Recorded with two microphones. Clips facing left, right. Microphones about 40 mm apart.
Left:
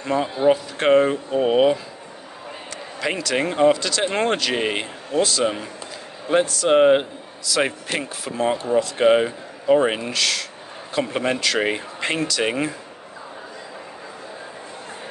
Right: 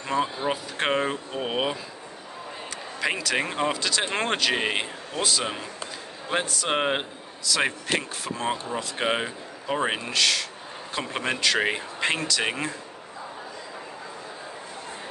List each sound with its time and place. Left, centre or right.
0.0 s speech: centre